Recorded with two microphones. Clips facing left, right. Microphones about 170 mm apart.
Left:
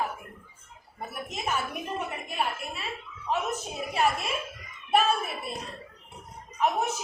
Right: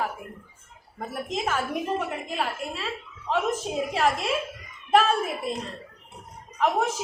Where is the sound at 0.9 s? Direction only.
90° right.